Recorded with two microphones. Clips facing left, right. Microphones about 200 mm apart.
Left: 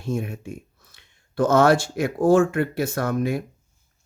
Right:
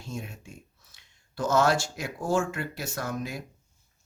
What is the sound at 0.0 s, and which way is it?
Speech, 55° left (ahead or behind).